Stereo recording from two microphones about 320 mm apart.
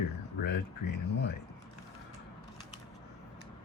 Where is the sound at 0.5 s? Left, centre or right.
Left.